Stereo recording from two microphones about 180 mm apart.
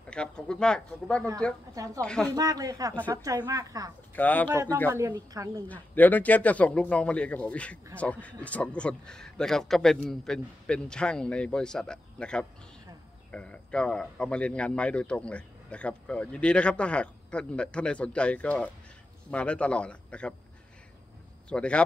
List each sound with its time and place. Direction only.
0.1 s a man's voice: 5° left (ahead or behind)
2.3 s a woman's voice: 20° right (ahead or behind)
4.1 s speech: 10° left (ahead or behind)
4.9 s a woman's voice: 20° right (ahead or behind)
5.7 s a man's voice: 10° left (ahead or behind)
21.5 s a man's voice: 5° left (ahead or behind)